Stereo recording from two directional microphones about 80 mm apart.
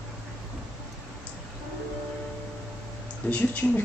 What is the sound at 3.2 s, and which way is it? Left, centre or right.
Speech, centre.